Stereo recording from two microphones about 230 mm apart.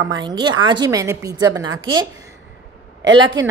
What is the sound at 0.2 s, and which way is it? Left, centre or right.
A woman's voice, centre.